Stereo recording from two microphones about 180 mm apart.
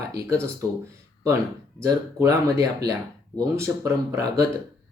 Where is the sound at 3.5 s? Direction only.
15° right (ahead or behind).